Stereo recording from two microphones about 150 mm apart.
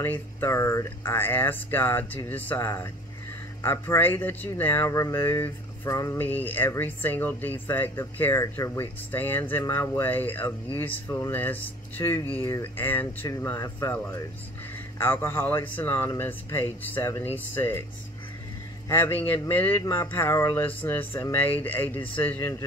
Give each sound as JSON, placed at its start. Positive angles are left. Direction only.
{"t": 0.0, "sound": "speech", "side_deg": 15}
{"t": 18.9, "sound": "speech", "side_deg": 15}